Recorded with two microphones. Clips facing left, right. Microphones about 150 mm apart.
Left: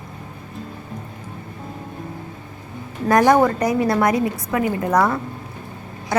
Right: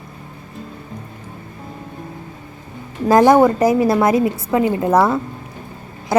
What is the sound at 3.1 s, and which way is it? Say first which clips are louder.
Speech: right 4 dB; 20° right (ahead or behind).